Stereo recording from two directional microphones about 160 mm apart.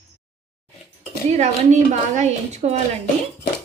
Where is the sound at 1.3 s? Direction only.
45° right (ahead or behind).